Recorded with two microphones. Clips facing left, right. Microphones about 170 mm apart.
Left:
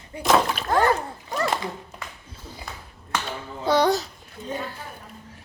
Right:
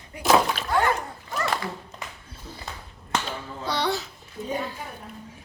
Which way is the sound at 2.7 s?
20° right (ahead or behind).